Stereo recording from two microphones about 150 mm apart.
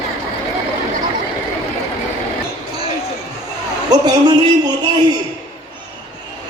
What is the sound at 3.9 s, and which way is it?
Speech, 25° right (ahead or behind).